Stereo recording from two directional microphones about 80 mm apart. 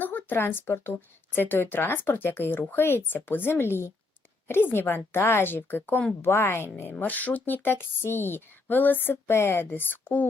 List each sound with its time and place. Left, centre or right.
0.0 s a woman's voice: left